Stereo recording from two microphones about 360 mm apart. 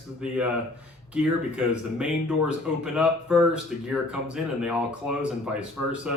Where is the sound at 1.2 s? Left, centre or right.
Centre.